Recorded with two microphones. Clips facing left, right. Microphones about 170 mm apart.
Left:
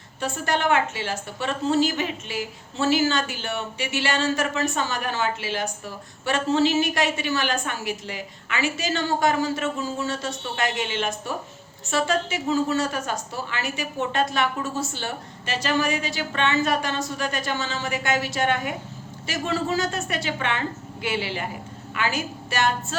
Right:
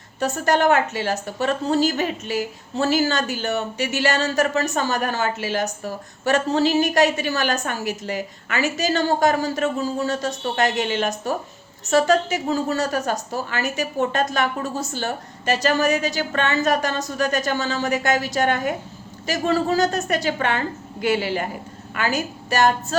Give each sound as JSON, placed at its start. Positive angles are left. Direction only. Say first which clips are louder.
{"t": 0.2, "sound": "a woman's voice", "louder": "right 6 dB", "side_deg": -40}